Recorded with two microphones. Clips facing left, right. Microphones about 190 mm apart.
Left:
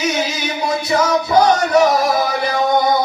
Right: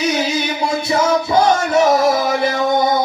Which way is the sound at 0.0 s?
30° right (ahead or behind).